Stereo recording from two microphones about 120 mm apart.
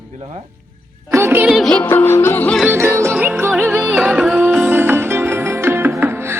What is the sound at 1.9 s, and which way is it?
Music, 20° left (ahead or behind).